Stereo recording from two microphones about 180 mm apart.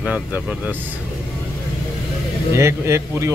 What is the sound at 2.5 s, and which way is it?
Speech, 15° right (ahead or behind).